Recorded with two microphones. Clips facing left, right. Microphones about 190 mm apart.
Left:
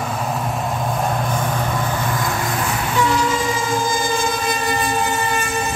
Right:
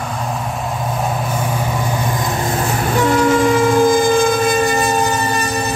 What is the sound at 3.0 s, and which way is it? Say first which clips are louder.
Train: right 6 dB; 55° right (ahead or behind).